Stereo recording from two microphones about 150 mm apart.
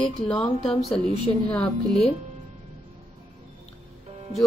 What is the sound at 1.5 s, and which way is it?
Speech, 10° left (ahead or behind).